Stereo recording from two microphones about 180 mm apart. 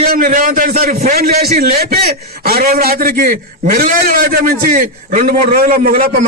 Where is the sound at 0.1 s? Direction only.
50° right (ahead or behind).